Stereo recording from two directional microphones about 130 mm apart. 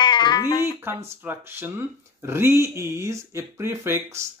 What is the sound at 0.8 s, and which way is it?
Speech, 15° right (ahead or behind).